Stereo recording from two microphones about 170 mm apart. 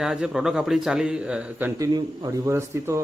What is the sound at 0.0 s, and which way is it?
A man's voice, 5° right (ahead or behind).